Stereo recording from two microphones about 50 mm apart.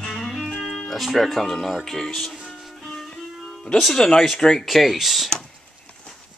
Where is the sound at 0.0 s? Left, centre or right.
Centre.